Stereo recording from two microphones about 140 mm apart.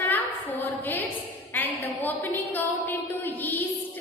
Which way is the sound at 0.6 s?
15° left (ahead or behind).